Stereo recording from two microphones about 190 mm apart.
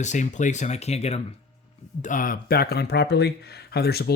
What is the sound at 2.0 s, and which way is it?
Speech, 45° left (ahead or behind).